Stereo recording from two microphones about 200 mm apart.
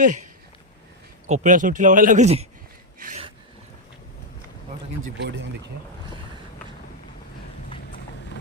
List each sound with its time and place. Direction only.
0.0 s speech: 40° right (ahead or behind)
1.3 s speech: 40° right (ahead or behind)
3.0 s a sound: 40° right (ahead or behind)
5.0 s speech: 65° right (ahead or behind)